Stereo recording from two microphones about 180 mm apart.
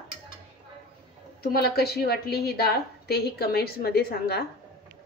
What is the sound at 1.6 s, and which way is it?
A woman's voice, 60° left (ahead or behind).